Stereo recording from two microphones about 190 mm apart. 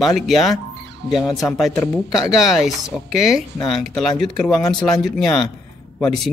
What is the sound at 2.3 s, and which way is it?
Speech, centre (ahead or behind).